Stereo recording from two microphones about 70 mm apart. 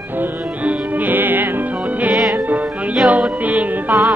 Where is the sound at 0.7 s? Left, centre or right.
Right.